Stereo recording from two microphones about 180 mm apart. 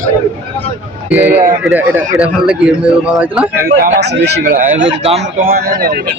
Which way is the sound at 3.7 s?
60° right (ahead or behind).